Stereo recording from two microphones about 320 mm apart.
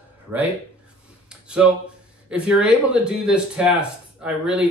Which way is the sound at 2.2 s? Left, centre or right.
Centre.